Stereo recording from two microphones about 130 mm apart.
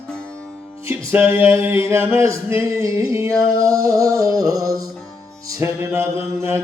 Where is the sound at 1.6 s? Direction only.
20° right (ahead or behind).